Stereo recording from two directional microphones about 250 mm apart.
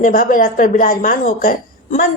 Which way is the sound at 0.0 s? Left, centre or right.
Left.